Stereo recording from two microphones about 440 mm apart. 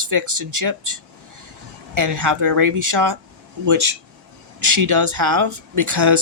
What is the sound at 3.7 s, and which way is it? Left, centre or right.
Speech, right.